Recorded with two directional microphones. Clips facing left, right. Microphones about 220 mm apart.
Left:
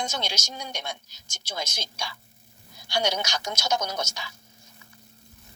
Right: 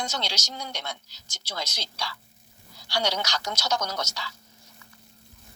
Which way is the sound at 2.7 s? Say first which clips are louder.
Left 1 dB; 20° left (ahead or behind).